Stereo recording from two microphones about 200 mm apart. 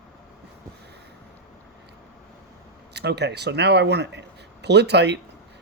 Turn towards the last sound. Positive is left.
turn(degrees=-60)  # may be behind; listen again after turning